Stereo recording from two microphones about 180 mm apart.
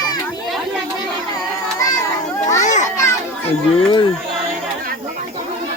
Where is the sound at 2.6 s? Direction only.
45° left (ahead or behind).